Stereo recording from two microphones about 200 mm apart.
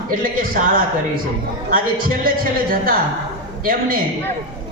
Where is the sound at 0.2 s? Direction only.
45° right (ahead or behind).